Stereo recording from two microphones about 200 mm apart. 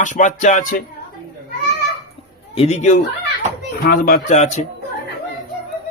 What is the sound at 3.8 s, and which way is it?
Speech, 50° left (ahead or behind).